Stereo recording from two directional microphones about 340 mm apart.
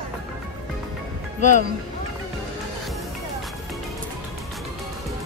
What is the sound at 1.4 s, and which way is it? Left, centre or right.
Speech, left.